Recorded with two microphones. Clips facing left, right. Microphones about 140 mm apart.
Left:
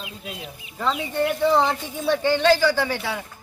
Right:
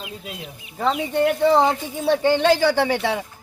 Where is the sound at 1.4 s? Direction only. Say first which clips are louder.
Right 2 dB; 15° right (ahead or behind).